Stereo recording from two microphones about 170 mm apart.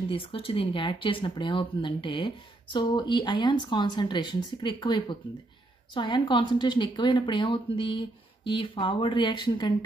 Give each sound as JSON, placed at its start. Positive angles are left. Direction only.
{"t": 0.1, "sound": "speech", "side_deg": 30}